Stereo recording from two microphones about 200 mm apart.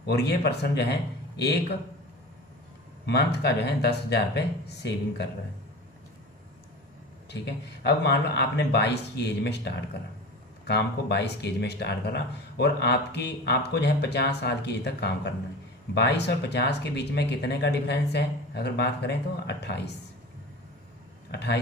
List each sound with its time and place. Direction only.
0.0 s speech: 55° left (ahead or behind)
3.1 s speech: 55° left (ahead or behind)
7.3 s speech: 55° left (ahead or behind)
21.3 s speech: 55° left (ahead or behind)